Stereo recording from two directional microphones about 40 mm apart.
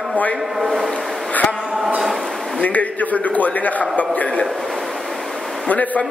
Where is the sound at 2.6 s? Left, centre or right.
Left.